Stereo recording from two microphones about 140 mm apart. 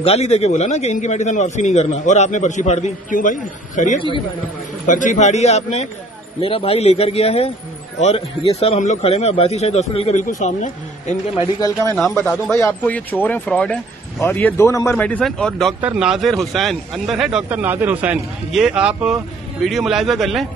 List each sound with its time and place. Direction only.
0.0 s a man's voice: 50° left (ahead or behind)
12.1 s a man's voice: 15° left (ahead or behind)
15.0 s a man's voice: 10° left (ahead or behind)
15.8 s speech: 5° right (ahead or behind)